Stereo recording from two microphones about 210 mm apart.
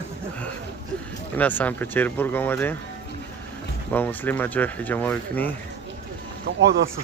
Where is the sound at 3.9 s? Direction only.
10° left (ahead or behind).